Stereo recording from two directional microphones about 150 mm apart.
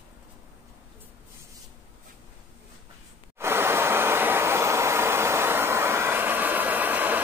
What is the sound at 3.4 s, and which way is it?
Vehicle, 15° right (ahead or behind).